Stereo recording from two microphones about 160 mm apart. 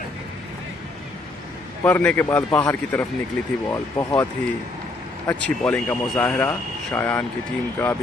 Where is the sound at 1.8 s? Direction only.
10° left (ahead or behind).